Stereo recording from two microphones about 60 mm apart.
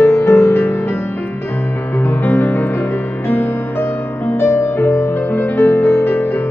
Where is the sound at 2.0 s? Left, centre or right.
Left.